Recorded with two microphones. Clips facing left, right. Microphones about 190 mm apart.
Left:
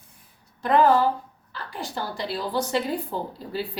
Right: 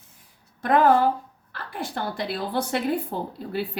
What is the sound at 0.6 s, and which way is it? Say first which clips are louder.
A woman's voice: even; 55° right (ahead or behind).